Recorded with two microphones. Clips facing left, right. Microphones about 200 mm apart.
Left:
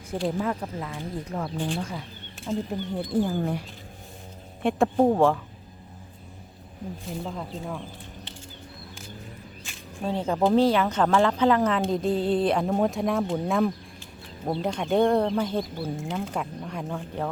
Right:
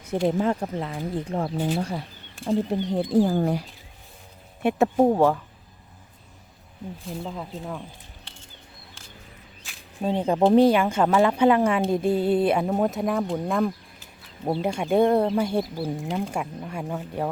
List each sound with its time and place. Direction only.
0.1 s speech: 25° right (ahead or behind)
4.6 s speech: 5° right (ahead or behind)
7.1 s speech: centre (ahead or behind)
10.0 s speech: 15° right (ahead or behind)